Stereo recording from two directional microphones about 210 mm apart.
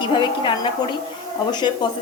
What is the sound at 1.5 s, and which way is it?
Speech, 20° left (ahead or behind).